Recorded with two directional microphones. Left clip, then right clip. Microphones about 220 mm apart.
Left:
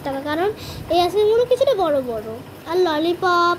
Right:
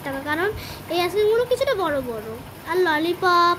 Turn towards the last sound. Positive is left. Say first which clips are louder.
# left 1 dB
turn(degrees=-5)  # may be behind; listen again after turning